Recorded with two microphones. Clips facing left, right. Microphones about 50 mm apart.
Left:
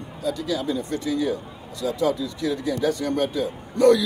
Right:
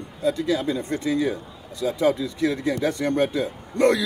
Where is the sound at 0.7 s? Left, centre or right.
Right.